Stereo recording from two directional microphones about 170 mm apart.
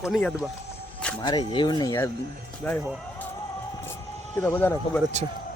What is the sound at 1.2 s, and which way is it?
Speech, 25° left (ahead or behind).